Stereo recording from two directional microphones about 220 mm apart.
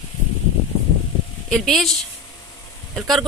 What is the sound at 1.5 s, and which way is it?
Speech, centre (ahead or behind).